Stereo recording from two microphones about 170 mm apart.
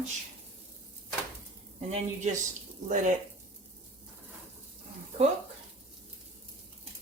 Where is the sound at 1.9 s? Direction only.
40° right (ahead or behind).